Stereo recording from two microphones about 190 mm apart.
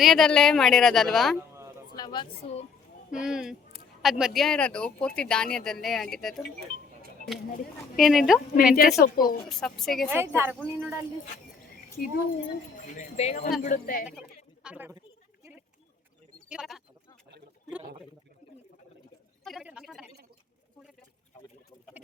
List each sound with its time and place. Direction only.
0.0 s speech: centre (ahead or behind)
2.0 s a woman's voice: 20° left (ahead or behind)
3.1 s speech: 5° right (ahead or behind)
7.9 s speech: centre (ahead or behind)
8.6 s speech: 50° left (ahead or behind)
9.5 s speech: centre (ahead or behind)
10.1 s speech: 10° right (ahead or behind)
12.9 s speech: 40° left (ahead or behind)
14.0 s speech: 5° right (ahead or behind)
16.5 s speech: centre (ahead or behind)
19.5 s a sound: 5° right (ahead or behind)